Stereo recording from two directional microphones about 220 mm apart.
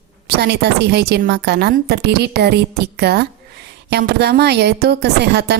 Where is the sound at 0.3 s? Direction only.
45° right (ahead or behind).